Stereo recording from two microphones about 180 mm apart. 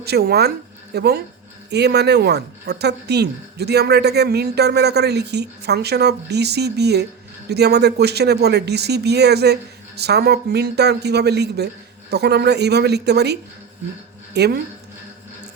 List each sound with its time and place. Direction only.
0.0 s a woman's voice: 60° right (ahead or behind)